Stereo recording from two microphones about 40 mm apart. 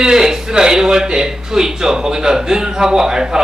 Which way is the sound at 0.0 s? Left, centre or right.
Centre.